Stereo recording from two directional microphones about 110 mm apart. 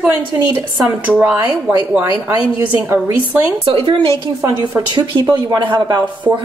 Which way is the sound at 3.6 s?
55° right (ahead or behind).